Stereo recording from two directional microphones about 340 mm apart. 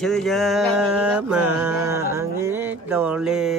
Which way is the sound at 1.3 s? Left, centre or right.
Right.